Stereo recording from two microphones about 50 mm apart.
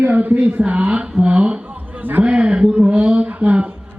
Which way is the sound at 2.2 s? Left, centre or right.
Right.